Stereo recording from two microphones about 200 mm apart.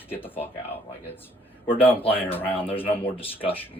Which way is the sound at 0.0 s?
10° left (ahead or behind).